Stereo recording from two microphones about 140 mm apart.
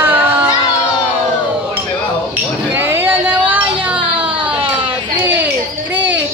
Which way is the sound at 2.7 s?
15° right (ahead or behind).